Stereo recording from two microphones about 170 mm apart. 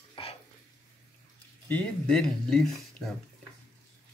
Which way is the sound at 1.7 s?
5° left (ahead or behind).